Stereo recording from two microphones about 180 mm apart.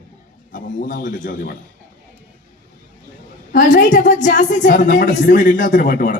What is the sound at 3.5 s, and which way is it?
A woman's voice, 45° left (ahead or behind).